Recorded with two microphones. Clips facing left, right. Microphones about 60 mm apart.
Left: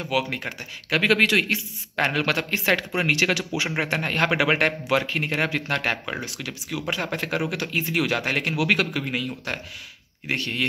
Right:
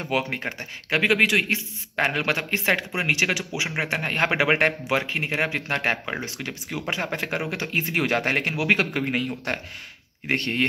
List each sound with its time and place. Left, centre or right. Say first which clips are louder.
0.0 s speech: even; right
1.0 s speech: left 1 dB; centre; by 10.6 s right